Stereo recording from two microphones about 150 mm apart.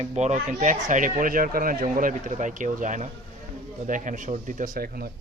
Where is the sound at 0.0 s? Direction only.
50° right (ahead or behind).